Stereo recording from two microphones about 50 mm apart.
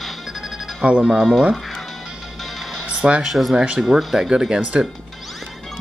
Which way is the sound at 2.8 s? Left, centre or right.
Right.